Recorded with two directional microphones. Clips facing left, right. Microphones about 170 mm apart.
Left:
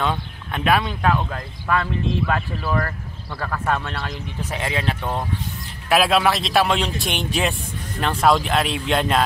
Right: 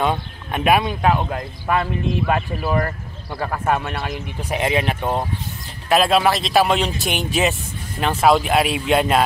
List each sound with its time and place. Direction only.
0.0 s speech: 15° right (ahead or behind)
5.9 s speech: centre (ahead or behind)